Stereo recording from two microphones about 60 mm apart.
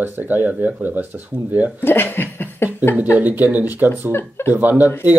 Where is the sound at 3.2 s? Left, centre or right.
Right.